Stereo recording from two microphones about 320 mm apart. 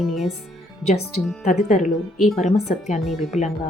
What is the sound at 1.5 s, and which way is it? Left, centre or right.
A woman's voice, left.